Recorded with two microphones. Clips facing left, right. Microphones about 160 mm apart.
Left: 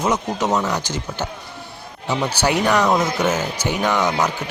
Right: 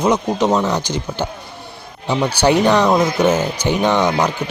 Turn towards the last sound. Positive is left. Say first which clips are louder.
# right 3 dB
turn(degrees=-20)  # may be behind; listen again after turning